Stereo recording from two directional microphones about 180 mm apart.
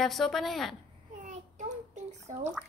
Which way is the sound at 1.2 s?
45° right (ahead or behind).